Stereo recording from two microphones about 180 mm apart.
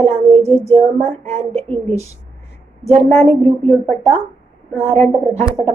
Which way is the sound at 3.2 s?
35° right (ahead or behind).